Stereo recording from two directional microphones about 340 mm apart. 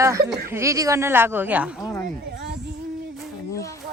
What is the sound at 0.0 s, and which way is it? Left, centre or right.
A woman's voice, centre.